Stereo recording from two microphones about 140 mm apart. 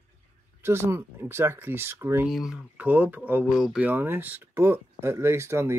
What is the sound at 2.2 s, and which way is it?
Speech, 5° right (ahead or behind).